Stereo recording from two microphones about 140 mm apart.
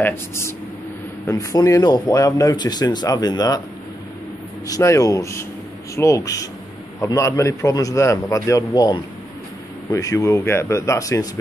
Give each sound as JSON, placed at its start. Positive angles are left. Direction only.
{"t": 0.0, "sound": "speech", "side_deg": 15}
{"t": 4.6, "sound": "speech", "side_deg": 25}